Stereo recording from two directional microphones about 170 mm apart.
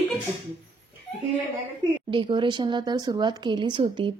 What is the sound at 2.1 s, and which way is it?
Speech, 30° right (ahead or behind).